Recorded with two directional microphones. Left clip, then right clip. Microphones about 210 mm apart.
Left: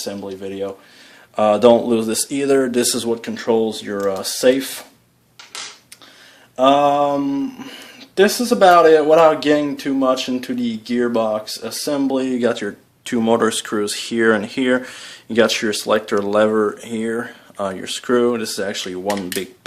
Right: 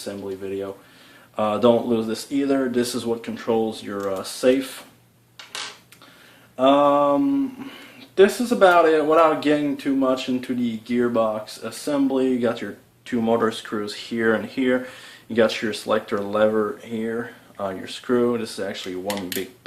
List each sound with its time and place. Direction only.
1.4 s speech: 45° left (ahead or behind)
6.6 s speech: 45° left (ahead or behind)